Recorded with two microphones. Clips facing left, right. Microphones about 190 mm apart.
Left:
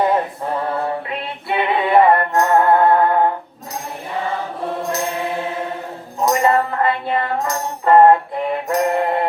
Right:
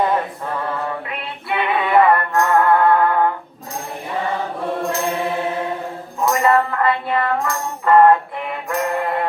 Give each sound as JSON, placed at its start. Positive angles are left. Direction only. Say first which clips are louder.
{"t": 1.5, "sound": "music", "louder": "left 2 dB", "side_deg": 25}
{"t": 6.2, "sound": "music", "louder": "even", "side_deg": 25}